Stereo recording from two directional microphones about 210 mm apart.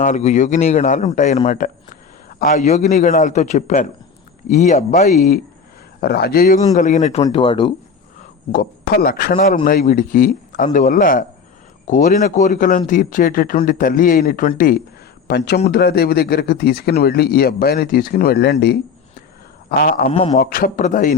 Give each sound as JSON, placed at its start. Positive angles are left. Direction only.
{"t": 0.0, "sound": "speech", "side_deg": 35}
{"t": 6.0, "sound": "speech", "side_deg": 50}
{"t": 6.7, "sound": "speech", "side_deg": 35}
{"t": 8.5, "sound": "speech", "side_deg": 45}
{"t": 15.3, "sound": "speech", "side_deg": 50}
{"t": 19.7, "sound": "speech", "side_deg": 45}
{"t": 20.1, "sound": "speech", "side_deg": 30}